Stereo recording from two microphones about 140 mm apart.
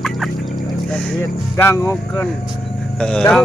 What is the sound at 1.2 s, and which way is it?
Speech, 15° left (ahead or behind).